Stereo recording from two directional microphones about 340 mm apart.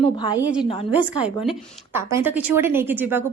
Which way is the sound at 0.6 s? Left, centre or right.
Centre.